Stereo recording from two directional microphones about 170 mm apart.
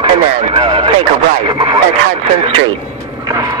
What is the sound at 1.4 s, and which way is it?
Radio, 30° right (ahead or behind).